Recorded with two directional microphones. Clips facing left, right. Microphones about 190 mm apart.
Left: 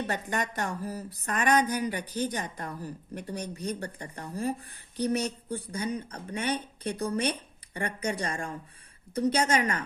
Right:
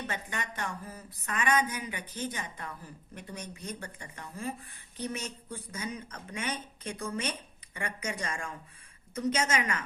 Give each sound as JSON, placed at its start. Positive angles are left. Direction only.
{"t": 0.1, "sound": "speech", "side_deg": 40}